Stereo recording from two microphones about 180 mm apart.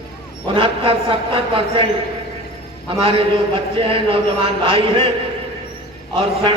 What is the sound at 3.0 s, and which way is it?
A man's voice, 30° right (ahead or behind).